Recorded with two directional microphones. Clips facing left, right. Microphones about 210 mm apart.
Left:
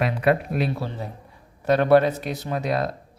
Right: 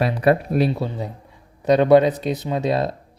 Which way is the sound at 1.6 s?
15° right (ahead or behind).